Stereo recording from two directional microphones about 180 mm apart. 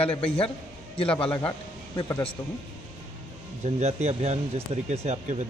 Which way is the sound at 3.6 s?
35° right (ahead or behind).